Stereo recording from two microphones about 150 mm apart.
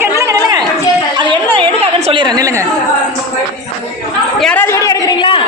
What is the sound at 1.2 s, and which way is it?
Chatter, 30° right (ahead or behind).